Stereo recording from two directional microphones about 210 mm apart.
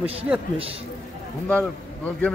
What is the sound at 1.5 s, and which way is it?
Speech, 5° left (ahead or behind).